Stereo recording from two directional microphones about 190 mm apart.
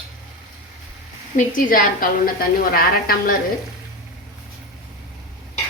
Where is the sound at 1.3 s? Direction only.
45° left (ahead or behind).